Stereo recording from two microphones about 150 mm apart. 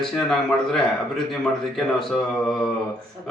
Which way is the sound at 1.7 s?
Centre (ahead or behind).